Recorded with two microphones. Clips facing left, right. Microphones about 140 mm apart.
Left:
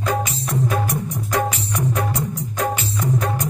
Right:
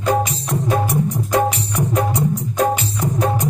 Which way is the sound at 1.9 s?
30° right (ahead or behind).